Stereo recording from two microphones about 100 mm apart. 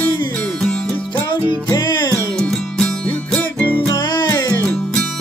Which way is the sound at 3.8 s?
45° left (ahead or behind).